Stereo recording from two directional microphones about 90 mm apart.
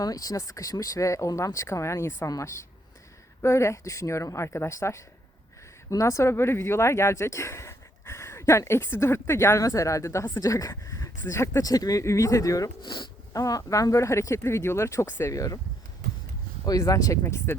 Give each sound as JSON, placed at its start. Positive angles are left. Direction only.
{"t": 0.0, "sound": "speech", "side_deg": 40}
{"t": 3.4, "sound": "speech", "side_deg": 30}
{"t": 11.6, "sound": "speech", "side_deg": 45}
{"t": 12.8, "sound": "speech", "side_deg": 60}
{"t": 13.3, "sound": "speech", "side_deg": 40}
{"t": 16.6, "sound": "speech", "side_deg": 40}
{"t": 17.2, "sound": "a woman's voice", "side_deg": 25}